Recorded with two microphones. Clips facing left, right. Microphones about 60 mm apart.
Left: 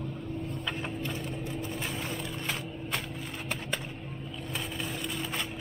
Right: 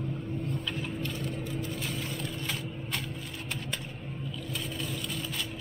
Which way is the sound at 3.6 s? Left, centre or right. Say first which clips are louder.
Left 2 dB; centre.